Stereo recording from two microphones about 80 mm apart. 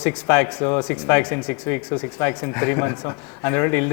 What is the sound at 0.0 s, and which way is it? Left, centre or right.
Speech, left.